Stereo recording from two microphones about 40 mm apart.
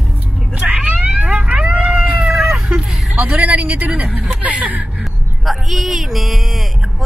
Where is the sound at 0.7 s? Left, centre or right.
Right.